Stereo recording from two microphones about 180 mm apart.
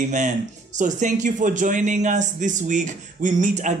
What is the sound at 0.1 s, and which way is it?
Speech, 40° right (ahead or behind).